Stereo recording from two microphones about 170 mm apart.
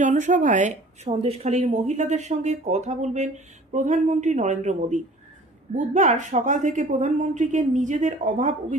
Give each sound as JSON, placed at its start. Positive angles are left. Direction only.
{"t": 0.0, "sound": "speech", "side_deg": -45}